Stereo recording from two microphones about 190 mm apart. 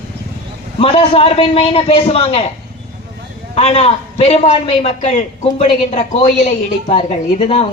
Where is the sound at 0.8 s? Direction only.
30° left (ahead or behind).